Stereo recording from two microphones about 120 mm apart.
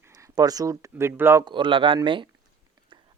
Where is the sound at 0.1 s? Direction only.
30° right (ahead or behind).